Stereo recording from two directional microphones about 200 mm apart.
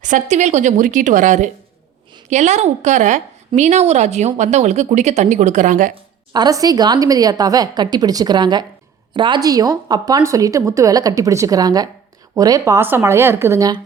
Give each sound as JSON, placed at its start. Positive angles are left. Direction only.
{"t": 0.0, "sound": "a woman's voice", "side_deg": -35}
{"t": 6.3, "sound": "a woman's voice", "side_deg": -20}